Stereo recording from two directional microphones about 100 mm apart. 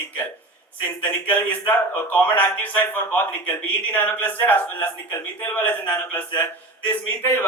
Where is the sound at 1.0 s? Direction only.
15° left (ahead or behind).